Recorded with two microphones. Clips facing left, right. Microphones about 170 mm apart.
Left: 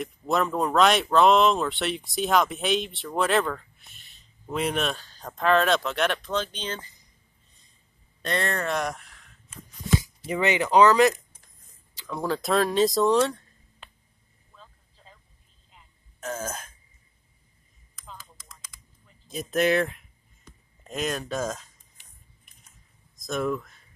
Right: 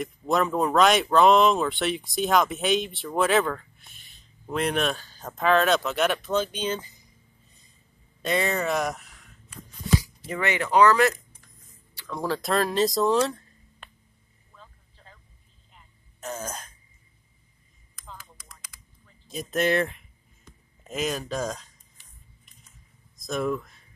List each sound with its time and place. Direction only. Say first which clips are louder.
0.0 s speech: right 1 dB; centre (ahead or behind)
8.2 s speech: right 2 dB; 5° right (ahead or behind)
9.5 s a sound: right 1 dB; 20° left (ahead or behind)
12.1 s speech: left 1 dB; centre (ahead or behind)
16.2 s throat clearing: left 2 dB; centre (ahead or behind)
19.0 s speech: left 1 dB; centre (ahead or behind)
23.1 s speech: even; centre (ahead or behind)